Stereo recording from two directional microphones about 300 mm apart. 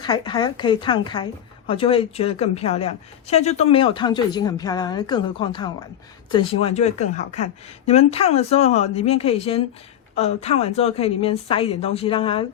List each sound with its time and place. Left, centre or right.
0.0 s a woman's voice: centre